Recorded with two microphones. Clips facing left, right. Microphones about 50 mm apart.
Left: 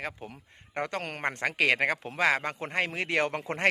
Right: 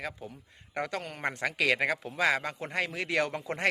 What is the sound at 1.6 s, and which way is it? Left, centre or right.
A man's voice, left.